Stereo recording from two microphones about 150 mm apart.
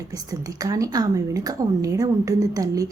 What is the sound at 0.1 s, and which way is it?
A woman's voice, 25° right (ahead or behind).